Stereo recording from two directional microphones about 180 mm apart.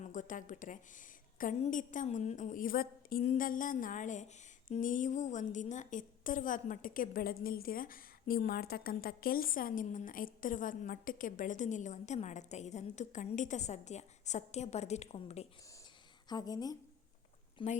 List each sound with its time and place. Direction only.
0.0 s a woman's voice: 45° left (ahead or behind)
16.3 s a woman's voice: 20° left (ahead or behind)